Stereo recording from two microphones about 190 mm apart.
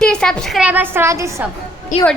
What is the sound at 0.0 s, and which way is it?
A woman's voice, 5° left (ahead or behind).